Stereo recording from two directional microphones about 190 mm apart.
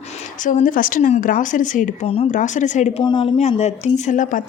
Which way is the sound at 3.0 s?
25° left (ahead or behind).